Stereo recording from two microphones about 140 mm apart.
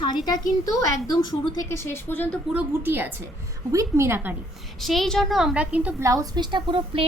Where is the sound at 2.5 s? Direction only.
15° right (ahead or behind).